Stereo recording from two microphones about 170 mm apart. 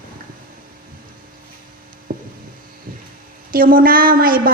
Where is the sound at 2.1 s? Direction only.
55° right (ahead or behind).